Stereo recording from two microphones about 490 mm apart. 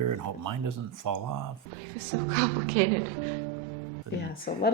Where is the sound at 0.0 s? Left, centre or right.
Right.